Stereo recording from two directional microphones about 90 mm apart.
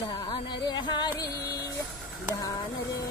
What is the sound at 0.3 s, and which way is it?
Music, 55° left (ahead or behind).